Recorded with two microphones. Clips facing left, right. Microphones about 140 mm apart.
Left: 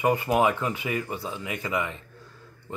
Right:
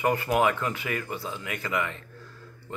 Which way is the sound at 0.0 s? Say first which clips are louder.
Left 1 dB; 15° left (ahead or behind).